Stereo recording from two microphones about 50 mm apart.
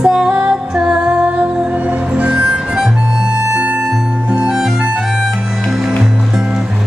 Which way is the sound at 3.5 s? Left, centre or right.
Right.